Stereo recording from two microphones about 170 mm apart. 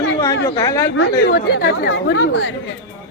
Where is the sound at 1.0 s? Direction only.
80° left.